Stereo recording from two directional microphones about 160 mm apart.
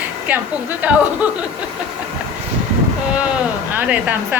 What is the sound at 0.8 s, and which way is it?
Speech, 10° right (ahead or behind).